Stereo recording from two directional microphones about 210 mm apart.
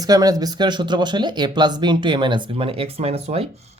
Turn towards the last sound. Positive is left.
turn(degrees=-30)  # may be behind; listen again after turning